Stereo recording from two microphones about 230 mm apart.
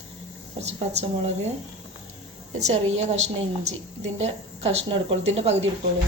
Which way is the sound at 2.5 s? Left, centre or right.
Right.